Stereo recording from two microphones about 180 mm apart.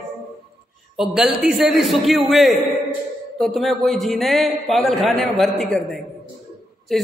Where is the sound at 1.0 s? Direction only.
Centre (ahead or behind).